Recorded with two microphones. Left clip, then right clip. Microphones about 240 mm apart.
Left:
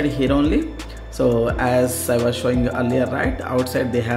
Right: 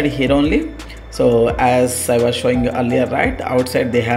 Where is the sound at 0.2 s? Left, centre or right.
Centre.